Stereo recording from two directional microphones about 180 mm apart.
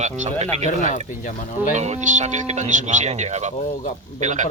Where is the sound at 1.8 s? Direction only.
40° right (ahead or behind).